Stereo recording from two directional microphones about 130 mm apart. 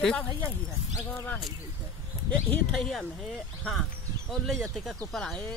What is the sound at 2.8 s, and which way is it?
Speech, 5° left (ahead or behind).